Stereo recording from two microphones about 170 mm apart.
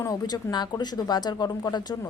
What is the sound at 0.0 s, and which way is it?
A woman's voice, 20° left (ahead or behind).